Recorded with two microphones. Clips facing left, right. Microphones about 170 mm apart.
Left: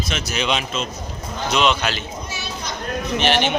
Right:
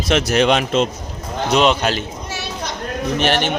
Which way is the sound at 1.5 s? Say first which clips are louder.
Right 4 dB; 40° right (ahead or behind).